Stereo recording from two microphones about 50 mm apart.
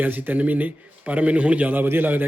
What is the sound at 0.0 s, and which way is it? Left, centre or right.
A man's voice, right.